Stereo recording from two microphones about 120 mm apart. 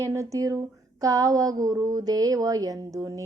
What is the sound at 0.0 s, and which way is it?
Speech, 25° right (ahead or behind).